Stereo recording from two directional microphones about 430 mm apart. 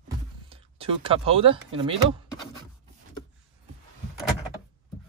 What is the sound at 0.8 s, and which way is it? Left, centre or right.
Speech, centre.